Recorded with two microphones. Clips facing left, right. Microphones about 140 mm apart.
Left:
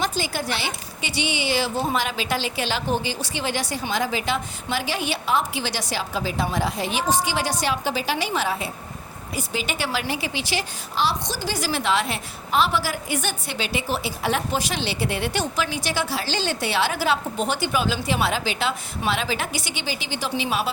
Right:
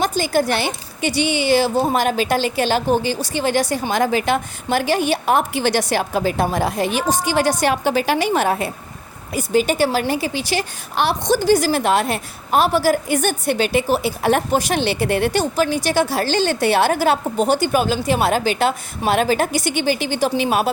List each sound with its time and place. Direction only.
0.0 s a woman's voice: 45° right (ahead or behind)
10.9 s a woman's voice: 60° right (ahead or behind)